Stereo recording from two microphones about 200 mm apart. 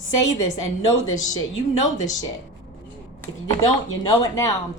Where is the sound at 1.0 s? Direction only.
90° left.